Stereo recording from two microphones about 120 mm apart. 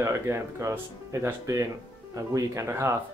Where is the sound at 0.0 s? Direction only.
20° right (ahead or behind).